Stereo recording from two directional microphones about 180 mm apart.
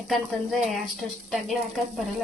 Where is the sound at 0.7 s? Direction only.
Centre (ahead or behind).